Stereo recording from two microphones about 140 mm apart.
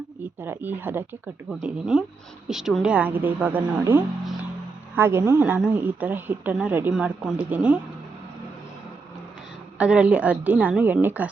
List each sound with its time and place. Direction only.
0.4 s a woman's voice: 15° right (ahead or behind)
9.7 s a woman's voice: 10° right (ahead or behind)